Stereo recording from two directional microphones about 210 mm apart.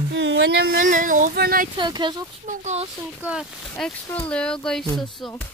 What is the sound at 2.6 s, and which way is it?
Speech, 30° right (ahead or behind).